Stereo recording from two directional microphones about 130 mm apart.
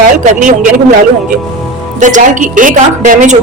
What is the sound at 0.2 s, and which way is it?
Speech, 90° right.